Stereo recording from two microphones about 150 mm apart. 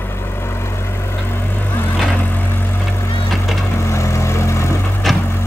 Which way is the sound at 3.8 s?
20° left (ahead or behind).